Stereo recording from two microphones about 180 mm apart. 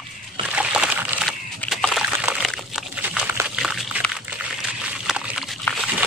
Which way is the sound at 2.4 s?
Centre (ahead or behind).